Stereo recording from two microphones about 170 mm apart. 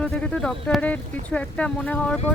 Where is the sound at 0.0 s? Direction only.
5° left (ahead or behind).